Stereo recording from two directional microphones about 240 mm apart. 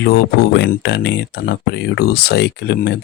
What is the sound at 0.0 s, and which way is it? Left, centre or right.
Speech, left.